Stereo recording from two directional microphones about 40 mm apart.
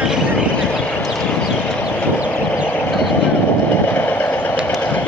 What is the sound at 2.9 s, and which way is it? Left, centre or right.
Vehicle, centre.